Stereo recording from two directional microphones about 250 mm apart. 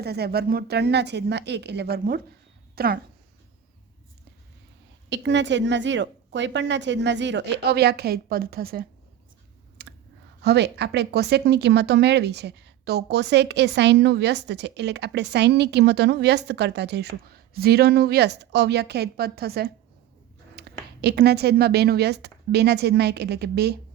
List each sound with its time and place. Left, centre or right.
0.0 s speech: right
5.0 s a woman's voice: right
9.8 s clicking: right
10.4 s speech: right